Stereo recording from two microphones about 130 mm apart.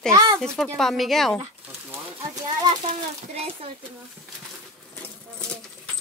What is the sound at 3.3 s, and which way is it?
Speech, 50° right (ahead or behind).